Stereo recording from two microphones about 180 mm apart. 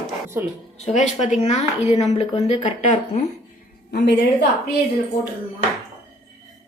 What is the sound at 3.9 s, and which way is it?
Speech, 65° left (ahead or behind).